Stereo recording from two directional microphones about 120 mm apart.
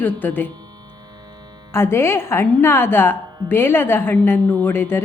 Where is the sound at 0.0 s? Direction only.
15° left (ahead or behind).